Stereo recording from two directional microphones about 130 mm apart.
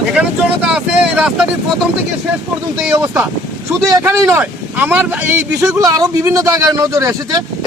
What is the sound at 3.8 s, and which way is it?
Speech, 20° right (ahead or behind).